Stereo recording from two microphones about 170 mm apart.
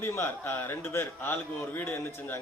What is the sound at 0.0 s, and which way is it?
A man's voice, 15° left (ahead or behind).